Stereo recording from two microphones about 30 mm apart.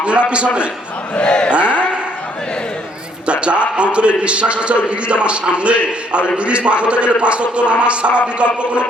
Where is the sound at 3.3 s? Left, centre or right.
Right.